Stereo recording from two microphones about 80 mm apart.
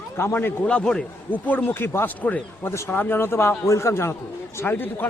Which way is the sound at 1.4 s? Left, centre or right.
Left.